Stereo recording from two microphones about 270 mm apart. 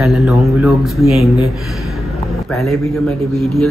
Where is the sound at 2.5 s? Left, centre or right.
Centre.